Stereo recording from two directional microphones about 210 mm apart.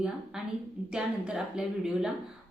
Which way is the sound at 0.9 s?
5° right (ahead or behind).